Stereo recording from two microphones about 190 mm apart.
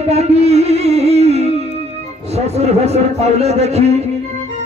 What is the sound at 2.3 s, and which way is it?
A man's voice, 35° right (ahead or behind).